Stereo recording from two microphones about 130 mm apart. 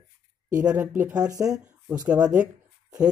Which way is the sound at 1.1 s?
25° right (ahead or behind).